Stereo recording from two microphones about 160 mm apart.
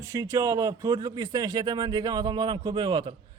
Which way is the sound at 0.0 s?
20° right (ahead or behind).